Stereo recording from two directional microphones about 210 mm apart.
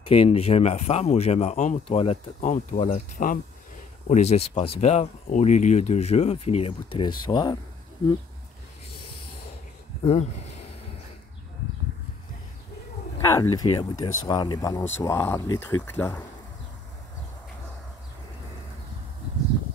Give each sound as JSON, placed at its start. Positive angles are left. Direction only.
{"t": 0.0, "sound": "speech", "side_deg": 30}
{"t": 10.0, "sound": "speech", "side_deg": 30}
{"t": 13.2, "sound": "speech", "side_deg": 15}